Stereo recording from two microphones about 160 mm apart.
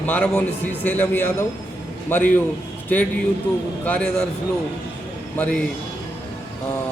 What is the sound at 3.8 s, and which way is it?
Speech, 10° left (ahead or behind).